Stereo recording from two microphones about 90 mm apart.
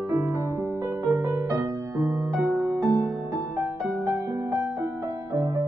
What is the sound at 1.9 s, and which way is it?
Music, 40° right (ahead or behind).